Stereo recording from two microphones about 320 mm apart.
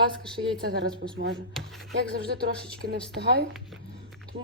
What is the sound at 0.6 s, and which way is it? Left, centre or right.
Speech, right.